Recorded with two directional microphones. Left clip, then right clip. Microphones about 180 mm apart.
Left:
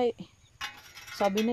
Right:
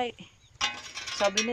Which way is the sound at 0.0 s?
30° left (ahead or behind).